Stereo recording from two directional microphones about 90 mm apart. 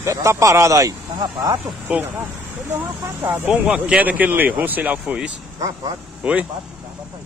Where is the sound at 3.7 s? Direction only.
15° right (ahead or behind).